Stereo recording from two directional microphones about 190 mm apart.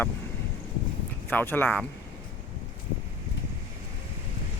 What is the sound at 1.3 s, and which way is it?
Speech, 10° left (ahead or behind).